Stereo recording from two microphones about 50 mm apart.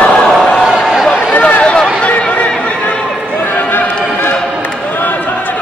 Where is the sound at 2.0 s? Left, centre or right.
Left.